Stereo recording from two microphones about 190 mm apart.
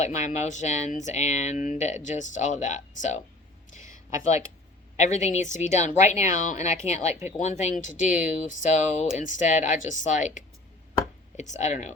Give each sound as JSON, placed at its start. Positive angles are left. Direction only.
{"t": 0.0, "sound": "speech", "side_deg": 40}
{"t": 3.8, "sound": "a sound", "side_deg": -15}
{"t": 4.9, "sound": "speech", "side_deg": 40}